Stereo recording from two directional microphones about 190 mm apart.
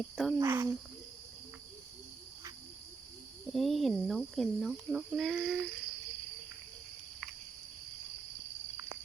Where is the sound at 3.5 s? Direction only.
Centre (ahead or behind).